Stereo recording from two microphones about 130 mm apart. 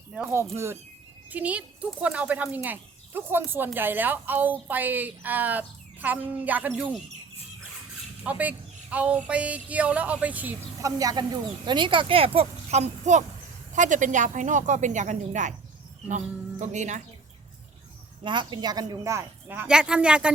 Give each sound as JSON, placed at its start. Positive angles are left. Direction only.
{"t": 0.5, "sound": "speech", "side_deg": -20}
{"t": 8.2, "sound": "speech", "side_deg": -10}
{"t": 10.8, "sound": "speech", "side_deg": -25}
{"t": 13.7, "sound": "a woman's voice", "side_deg": -75}
{"t": 18.2, "sound": "speech", "side_deg": -35}